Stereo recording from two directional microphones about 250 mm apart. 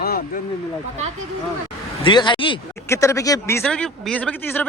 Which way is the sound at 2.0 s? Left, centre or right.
Centre.